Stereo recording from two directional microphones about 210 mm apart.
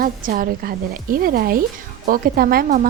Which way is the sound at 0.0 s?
45° right (ahead or behind).